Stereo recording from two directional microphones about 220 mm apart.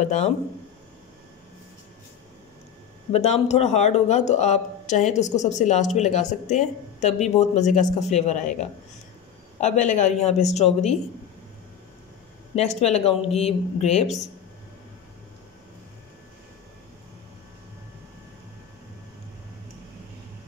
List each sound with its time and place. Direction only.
0.0 s speech: 30° left (ahead or behind)
3.1 s speech: 30° left (ahead or behind)
12.5 s speech: 30° left (ahead or behind)